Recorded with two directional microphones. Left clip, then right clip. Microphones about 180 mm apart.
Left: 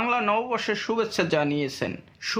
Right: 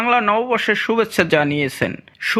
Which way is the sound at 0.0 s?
20° right (ahead or behind).